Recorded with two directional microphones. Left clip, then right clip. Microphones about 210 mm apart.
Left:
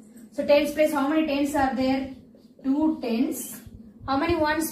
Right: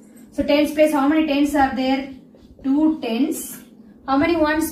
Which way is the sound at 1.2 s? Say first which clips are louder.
Right 6 dB; 5° left (ahead or behind).